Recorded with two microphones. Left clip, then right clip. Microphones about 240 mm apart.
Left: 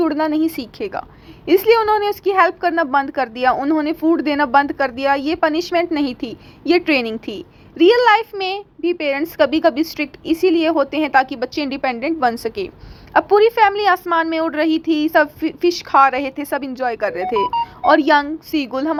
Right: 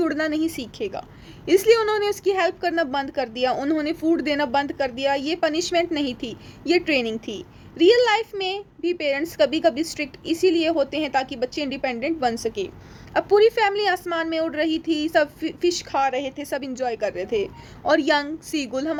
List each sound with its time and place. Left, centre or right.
0.0 s a woman's voice: centre